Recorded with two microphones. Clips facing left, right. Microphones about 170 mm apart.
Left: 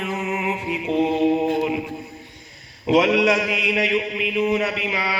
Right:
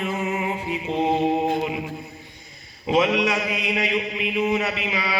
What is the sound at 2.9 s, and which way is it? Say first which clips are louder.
A man's voice: left 3 dB; 90° left.